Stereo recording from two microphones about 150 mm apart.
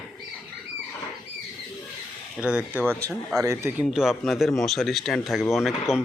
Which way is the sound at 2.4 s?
10° right (ahead or behind).